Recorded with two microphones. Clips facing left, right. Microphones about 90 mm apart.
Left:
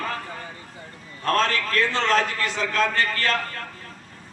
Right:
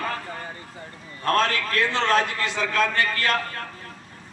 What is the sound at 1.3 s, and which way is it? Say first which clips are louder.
A man's voice: even; 20° right (ahead or behind).